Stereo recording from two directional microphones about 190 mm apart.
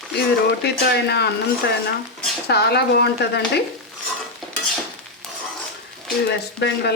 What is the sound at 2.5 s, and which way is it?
Speech, 60° left (ahead or behind).